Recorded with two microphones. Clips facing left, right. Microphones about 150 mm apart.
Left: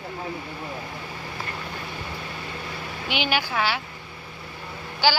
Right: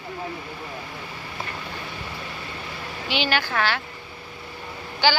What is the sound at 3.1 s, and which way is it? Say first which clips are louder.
Speech: right 1 dB; 10° left (ahead or behind).